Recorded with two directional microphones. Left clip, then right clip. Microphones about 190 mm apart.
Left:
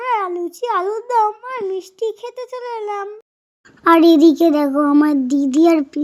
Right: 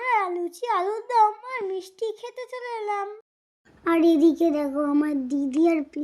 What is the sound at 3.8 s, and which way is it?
A child's voice, 35° left (ahead or behind).